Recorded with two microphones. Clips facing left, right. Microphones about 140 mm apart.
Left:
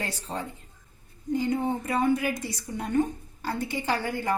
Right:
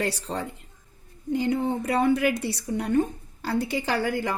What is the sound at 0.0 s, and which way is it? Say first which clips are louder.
A woman's voice: right 5 dB; 75° right (ahead or behind).